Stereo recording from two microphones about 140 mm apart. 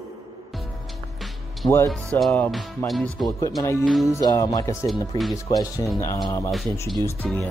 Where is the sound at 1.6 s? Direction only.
30° left (ahead or behind).